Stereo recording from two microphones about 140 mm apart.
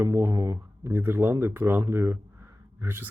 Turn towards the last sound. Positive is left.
turn(degrees=-15)  # may be behind; listen again after turning